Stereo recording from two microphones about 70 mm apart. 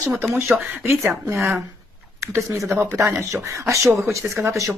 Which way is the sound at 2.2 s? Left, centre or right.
Right.